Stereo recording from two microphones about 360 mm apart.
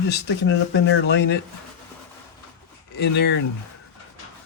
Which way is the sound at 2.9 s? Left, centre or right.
Left.